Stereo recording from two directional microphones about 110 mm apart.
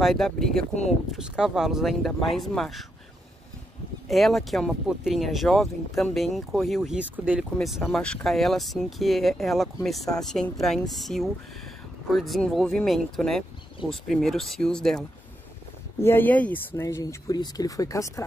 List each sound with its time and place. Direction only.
0.0 s speech: centre (ahead or behind)
4.1 s speech: centre (ahead or behind)
7.0 s speech: 10° right (ahead or behind)
7.6 s speech: centre (ahead or behind)
16.0 s speech: 20° left (ahead or behind)